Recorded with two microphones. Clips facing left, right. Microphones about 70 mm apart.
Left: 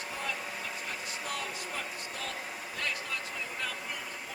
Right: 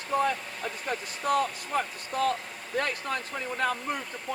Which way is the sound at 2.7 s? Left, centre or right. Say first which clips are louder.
Right 8 dB; right.